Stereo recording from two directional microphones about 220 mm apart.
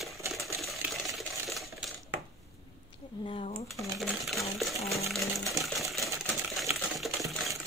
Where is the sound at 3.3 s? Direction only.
25° left (ahead or behind).